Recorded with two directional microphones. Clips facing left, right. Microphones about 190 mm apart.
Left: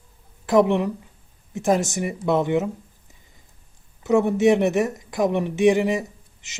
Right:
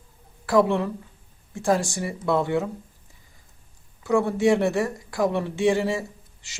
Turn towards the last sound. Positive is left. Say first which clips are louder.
# right 1 dB
turn(degrees=20)  # may be behind; listen again after turning